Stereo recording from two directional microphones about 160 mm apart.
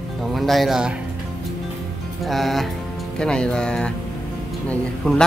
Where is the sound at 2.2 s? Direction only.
Centre (ahead or behind).